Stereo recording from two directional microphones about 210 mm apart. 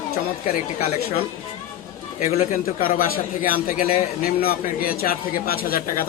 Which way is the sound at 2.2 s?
45° left (ahead or behind).